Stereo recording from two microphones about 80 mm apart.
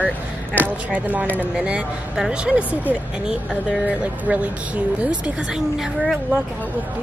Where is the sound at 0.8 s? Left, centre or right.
Centre.